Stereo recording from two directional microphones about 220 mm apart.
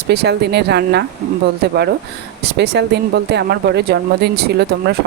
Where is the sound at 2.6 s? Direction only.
50° right (ahead or behind).